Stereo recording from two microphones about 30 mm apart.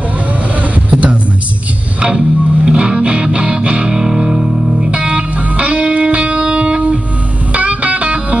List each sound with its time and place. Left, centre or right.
0.8 s music: right
2.0 s music: right
5.0 s music: right